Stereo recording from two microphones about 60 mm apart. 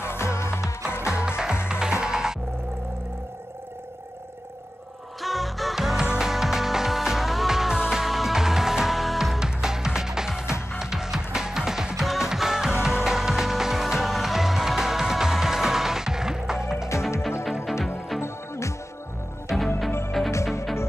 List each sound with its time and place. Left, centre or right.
0.0 s music: left
1.0 s music: centre
5.2 s music: centre
19.5 s music: centre